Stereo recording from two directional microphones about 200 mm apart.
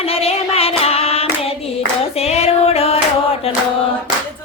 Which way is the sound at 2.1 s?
30° left (ahead or behind).